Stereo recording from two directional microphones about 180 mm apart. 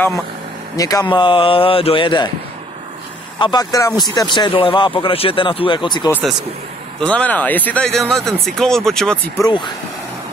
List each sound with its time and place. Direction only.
0.7 s speech: 20° left (ahead or behind)
3.3 s speech: 25° left (ahead or behind)
7.0 s speech: 5° left (ahead or behind)
9.4 s speech: 25° left (ahead or behind)